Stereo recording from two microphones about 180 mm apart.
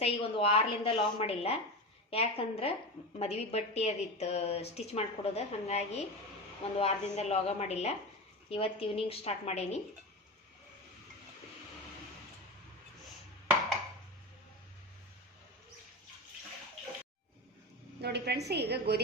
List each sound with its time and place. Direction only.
0.0 s a woman's voice: 30° left (ahead or behind)
18.0 s a woman's voice: 65° right (ahead or behind)